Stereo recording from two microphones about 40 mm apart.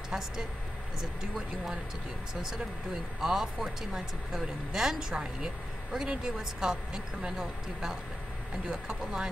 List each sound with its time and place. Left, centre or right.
2.4 s speech: centre